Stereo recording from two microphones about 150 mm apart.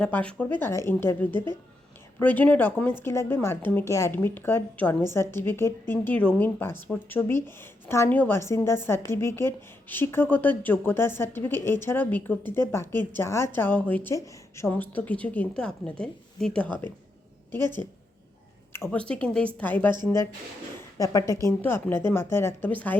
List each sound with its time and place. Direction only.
0.0 s a woman's voice: 10° left (ahead or behind)
18.7 s a woman's voice: 10° left (ahead or behind)